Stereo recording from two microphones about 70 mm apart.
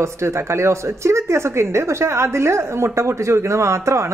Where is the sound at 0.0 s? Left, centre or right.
Right.